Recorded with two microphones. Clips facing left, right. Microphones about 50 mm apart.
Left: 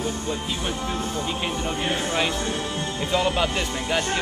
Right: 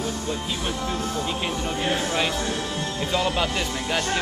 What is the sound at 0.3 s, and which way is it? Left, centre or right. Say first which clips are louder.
Speech: even; centre.